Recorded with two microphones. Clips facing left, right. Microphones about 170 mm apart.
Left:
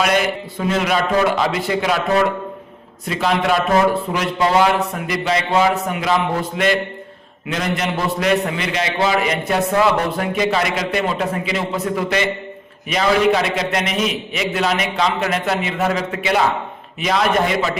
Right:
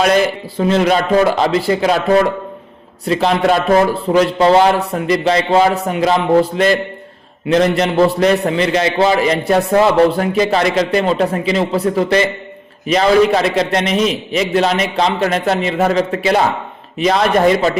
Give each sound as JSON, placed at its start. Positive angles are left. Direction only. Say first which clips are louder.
{"t": 0.7, "sound": "a man's voice", "louder": "right 5 dB", "side_deg": -35}
{"t": 3.1, "sound": "a man's voice", "louder": "right 5 dB", "side_deg": -35}